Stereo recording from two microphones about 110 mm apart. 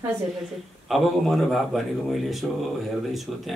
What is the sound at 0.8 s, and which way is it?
Speech, centre (ahead or behind).